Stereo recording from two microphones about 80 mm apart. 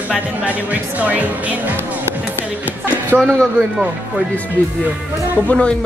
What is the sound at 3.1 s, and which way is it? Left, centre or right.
Speech, centre.